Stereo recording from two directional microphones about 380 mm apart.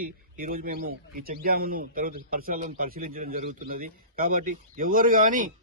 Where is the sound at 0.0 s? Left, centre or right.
Right.